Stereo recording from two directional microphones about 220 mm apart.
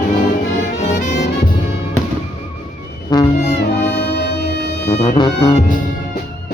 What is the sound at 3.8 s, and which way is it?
Music, 50° left (ahead or behind).